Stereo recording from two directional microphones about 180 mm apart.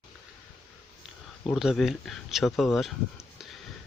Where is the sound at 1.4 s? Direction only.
Centre (ahead or behind).